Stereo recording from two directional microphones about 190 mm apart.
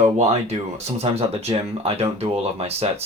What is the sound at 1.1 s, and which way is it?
Speech, 30° right (ahead or behind).